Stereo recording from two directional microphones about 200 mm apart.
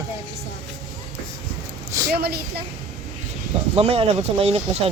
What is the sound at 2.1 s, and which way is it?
Speech, 50° right (ahead or behind).